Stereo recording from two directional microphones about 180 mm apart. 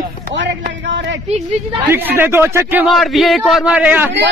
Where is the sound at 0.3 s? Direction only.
90° right.